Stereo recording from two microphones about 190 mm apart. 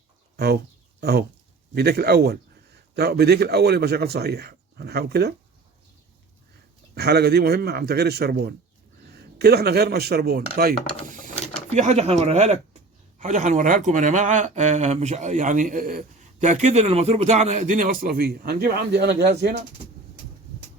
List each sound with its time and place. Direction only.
0.3 s speech: 60° right (ahead or behind)
6.9 s speech: 60° right (ahead or behind)
11.7 s speech: 35° right (ahead or behind); by 19.5 s 60° right (ahead or behind)